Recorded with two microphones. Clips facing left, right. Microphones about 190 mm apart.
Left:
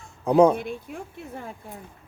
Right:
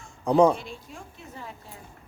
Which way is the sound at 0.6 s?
60° left (ahead or behind).